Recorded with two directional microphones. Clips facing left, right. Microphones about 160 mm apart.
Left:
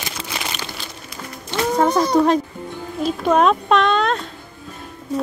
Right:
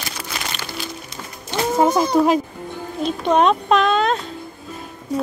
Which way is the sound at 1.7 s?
5° right (ahead or behind).